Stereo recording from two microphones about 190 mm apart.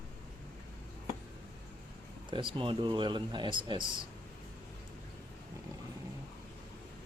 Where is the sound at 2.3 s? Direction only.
25° right (ahead or behind).